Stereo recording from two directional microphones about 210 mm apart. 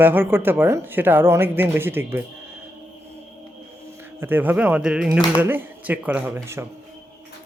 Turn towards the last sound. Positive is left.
turn(degrees=-10)  # may be behind; listen again after turning